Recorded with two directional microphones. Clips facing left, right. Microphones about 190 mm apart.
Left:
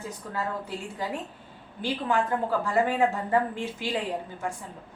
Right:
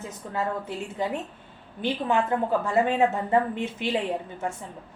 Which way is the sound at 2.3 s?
20° right (ahead or behind).